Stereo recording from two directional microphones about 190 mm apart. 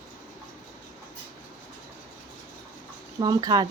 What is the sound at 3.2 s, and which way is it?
Speech, 20° right (ahead or behind).